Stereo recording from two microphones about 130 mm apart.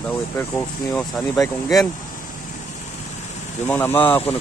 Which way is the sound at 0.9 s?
25° left (ahead or behind).